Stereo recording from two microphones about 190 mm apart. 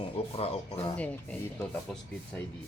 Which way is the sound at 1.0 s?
10° left (ahead or behind).